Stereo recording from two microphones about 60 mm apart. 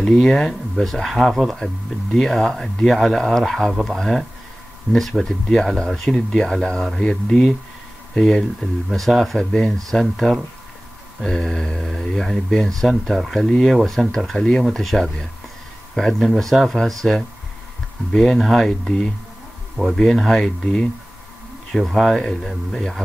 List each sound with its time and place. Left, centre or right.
0.0 s speech: centre